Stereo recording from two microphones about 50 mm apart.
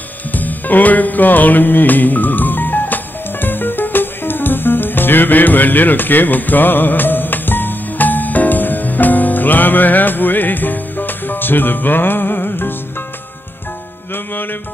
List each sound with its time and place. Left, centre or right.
0.3 s music: left
14.1 s music: left